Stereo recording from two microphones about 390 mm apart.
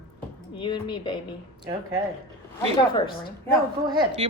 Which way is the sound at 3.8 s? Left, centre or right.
Centre.